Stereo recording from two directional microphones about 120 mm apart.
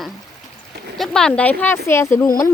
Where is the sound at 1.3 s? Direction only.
15° left (ahead or behind).